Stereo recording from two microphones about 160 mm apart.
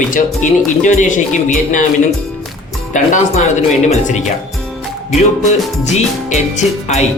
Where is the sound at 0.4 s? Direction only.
50° left (ahead or behind).